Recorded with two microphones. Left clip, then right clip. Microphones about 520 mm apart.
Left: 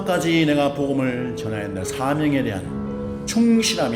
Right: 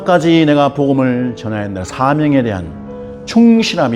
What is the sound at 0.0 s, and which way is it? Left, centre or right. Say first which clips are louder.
Speech: right 9 dB; right.